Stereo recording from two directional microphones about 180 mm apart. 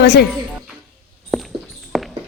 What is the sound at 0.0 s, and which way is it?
Speech, 65° left (ahead or behind).